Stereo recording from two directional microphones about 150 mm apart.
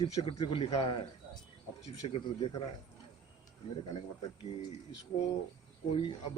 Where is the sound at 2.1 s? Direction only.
40° left (ahead or behind).